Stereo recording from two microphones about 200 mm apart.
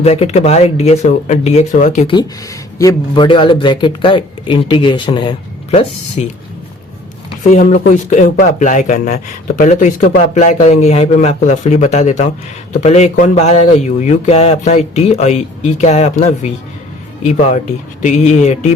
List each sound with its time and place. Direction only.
0.0 s speech: 30° left (ahead or behind)
2.0 s speech: 20° left (ahead or behind)
7.6 s speech: 40° left (ahead or behind)